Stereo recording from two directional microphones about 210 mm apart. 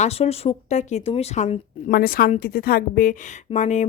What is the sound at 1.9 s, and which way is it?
Speech, 45° left (ahead or behind).